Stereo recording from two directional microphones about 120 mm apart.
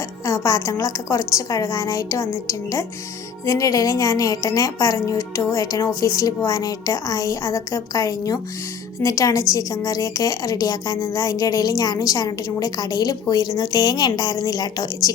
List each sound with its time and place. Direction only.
0.3 s a woman's voice: 25° left (ahead or behind)